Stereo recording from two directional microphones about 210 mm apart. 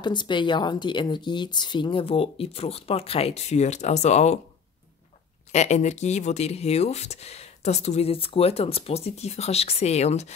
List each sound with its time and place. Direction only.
0.0 s speech: 20° left (ahead or behind)
5.5 s speech: 35° left (ahead or behind)